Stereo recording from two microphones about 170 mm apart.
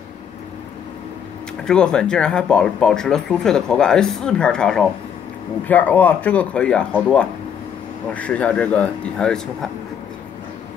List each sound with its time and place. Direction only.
1.6 s speech: 5° left (ahead or behind)